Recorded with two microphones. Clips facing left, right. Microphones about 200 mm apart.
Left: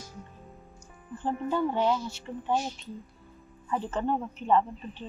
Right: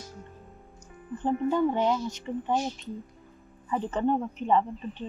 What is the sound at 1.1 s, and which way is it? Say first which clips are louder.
Speech: right 4 dB; 20° right (ahead or behind).